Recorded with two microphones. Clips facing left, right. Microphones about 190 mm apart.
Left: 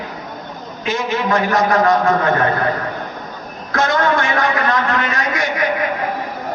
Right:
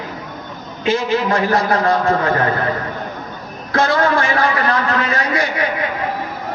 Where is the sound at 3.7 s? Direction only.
30° right (ahead or behind).